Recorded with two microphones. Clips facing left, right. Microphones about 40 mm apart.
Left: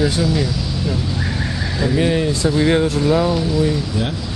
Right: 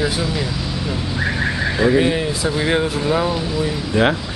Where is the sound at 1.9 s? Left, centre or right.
Centre.